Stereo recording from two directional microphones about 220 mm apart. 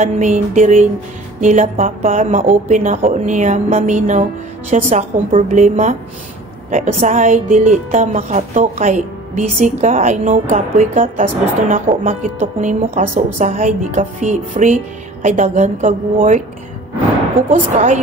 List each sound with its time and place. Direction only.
0.0 s speech: 35° right (ahead or behind)
17.5 s speech: 35° right (ahead or behind)